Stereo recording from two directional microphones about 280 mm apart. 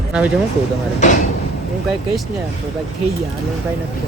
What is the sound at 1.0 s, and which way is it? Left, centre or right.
Speech, left.